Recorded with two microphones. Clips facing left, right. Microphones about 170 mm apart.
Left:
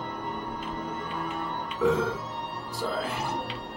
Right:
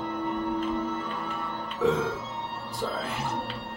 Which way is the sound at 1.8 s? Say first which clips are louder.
Even; centre (ahead or behind).